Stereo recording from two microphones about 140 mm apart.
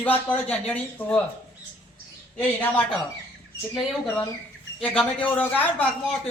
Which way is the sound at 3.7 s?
Centre (ahead or behind).